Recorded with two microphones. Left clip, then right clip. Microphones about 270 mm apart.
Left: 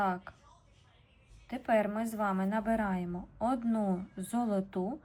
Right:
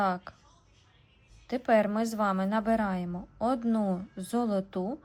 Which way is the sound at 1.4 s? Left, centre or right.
Centre.